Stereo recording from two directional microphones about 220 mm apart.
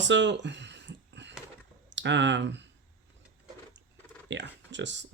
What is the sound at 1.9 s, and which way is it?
Speech, 55° right (ahead or behind).